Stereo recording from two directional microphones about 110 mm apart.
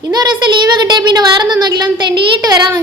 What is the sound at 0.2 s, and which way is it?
Speech, 40° right (ahead or behind).